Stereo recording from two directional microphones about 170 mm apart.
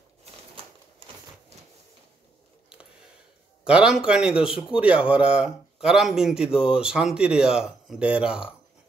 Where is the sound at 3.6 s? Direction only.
5° right (ahead or behind).